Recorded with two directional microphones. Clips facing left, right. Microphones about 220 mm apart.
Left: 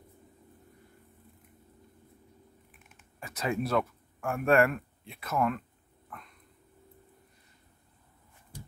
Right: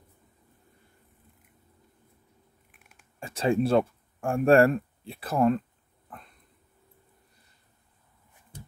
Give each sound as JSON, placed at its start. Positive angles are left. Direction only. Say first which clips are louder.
{"t": 3.2, "sound": "speech", "louder": "right 7 dB", "side_deg": -30}
{"t": 6.0, "sound": "dog", "louder": "right 1 dB", "side_deg": -35}